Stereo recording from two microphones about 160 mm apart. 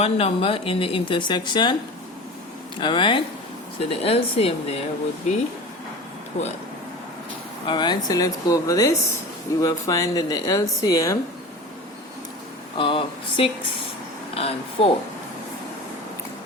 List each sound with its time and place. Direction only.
0.0 s a woman's voice: 40° left (ahead or behind)
2.8 s a woman's voice: 30° left (ahead or behind)
7.7 s speech: 25° left (ahead or behind)
12.7 s a woman's voice: 35° left (ahead or behind)